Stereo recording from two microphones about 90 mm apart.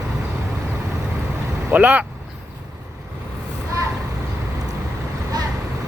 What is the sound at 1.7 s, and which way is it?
Speech, 15° right (ahead or behind).